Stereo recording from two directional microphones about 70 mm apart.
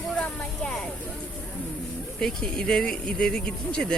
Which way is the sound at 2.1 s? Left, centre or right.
Centre.